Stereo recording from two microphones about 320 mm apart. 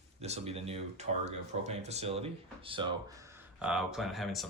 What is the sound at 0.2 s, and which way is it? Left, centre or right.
Speech, centre.